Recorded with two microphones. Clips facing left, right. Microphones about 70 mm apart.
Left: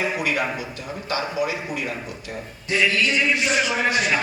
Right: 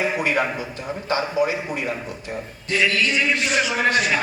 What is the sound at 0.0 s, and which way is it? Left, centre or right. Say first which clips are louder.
A man's voice: right 2 dB; right.